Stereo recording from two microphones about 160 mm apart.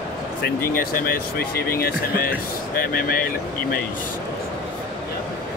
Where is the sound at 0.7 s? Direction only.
65° left (ahead or behind).